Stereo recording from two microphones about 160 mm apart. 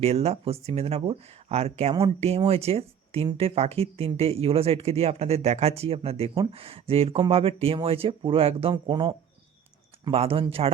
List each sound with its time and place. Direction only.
0.0 s speech: 40° right (ahead or behind)